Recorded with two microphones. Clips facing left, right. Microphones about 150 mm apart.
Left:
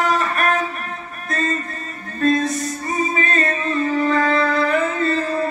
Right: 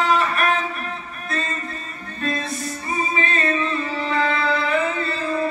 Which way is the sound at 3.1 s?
45° left (ahead or behind).